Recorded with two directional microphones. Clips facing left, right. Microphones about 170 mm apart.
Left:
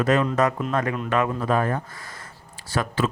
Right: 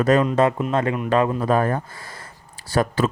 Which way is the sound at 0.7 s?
25° right (ahead or behind).